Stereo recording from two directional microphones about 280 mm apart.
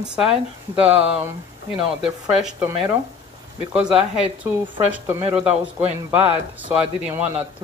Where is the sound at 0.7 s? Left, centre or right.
Centre.